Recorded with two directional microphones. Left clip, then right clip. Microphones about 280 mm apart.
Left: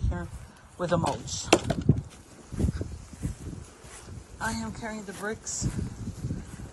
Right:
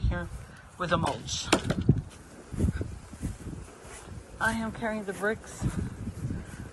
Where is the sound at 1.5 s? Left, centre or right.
Centre.